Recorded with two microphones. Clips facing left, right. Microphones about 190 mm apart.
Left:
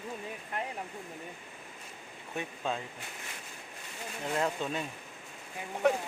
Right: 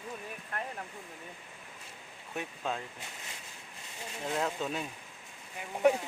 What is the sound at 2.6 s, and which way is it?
Speech, 5° right (ahead or behind).